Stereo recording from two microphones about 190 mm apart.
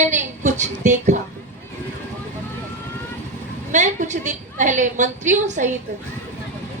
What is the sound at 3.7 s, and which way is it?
A woman's voice, 40° right (ahead or behind).